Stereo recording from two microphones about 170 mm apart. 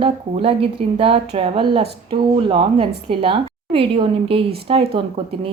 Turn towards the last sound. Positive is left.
turn(degrees=-35)  # may be behind; listen again after turning